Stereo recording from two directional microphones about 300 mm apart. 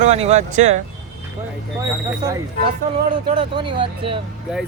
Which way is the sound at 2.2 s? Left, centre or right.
Centre.